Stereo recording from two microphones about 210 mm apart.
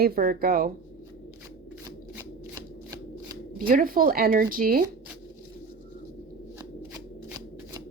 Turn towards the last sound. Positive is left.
turn(degrees=-15)  # may be behind; listen again after turning